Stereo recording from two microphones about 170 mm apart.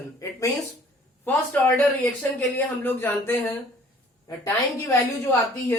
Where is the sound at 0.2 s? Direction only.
20° left (ahead or behind).